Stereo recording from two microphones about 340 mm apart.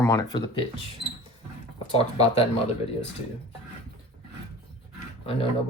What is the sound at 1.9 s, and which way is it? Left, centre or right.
Speech, centre.